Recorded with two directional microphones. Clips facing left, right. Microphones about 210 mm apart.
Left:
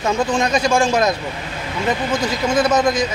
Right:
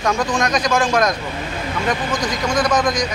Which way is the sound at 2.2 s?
5° left (ahead or behind).